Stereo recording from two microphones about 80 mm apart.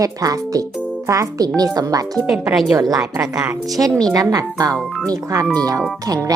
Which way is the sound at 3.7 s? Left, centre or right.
Right.